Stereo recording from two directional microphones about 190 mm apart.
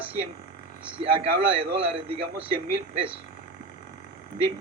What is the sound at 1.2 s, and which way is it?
Speech, 30° right (ahead or behind).